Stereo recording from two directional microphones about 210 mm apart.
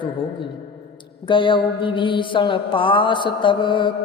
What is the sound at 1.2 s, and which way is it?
Music, 25° left (ahead or behind).